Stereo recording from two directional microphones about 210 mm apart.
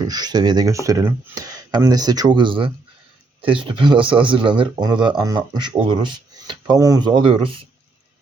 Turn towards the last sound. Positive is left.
turn(degrees=-25)  # may be behind; listen again after turning